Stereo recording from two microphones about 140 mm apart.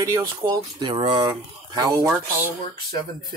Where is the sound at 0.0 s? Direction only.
25° right (ahead or behind).